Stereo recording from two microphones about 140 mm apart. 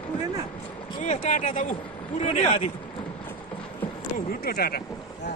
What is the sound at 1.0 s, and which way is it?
Speech, 60° left (ahead or behind).